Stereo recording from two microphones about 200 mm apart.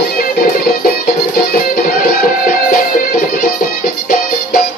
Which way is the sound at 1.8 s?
45° left (ahead or behind).